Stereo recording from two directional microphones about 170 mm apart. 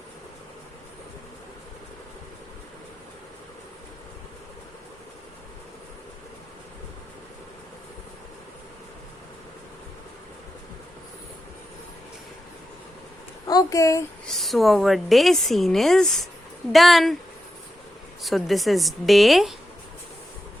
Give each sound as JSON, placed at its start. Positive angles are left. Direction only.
{"t": 13.5, "sound": "speech", "side_deg": 20}
{"t": 14.3, "sound": "speech", "side_deg": 0}
{"t": 18.2, "sound": "speech", "side_deg": 0}